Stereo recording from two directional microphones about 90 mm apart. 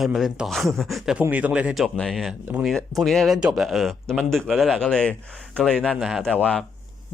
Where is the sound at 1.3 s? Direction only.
15° right (ahead or behind).